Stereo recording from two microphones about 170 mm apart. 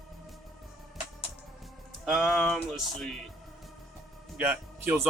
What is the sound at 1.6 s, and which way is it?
Speech, centre (ahead or behind).